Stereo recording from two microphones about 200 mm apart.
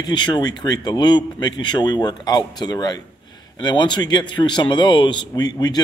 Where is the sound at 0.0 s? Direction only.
20° left (ahead or behind).